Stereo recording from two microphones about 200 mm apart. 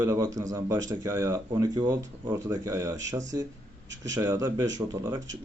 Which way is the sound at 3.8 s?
65° right (ahead or behind).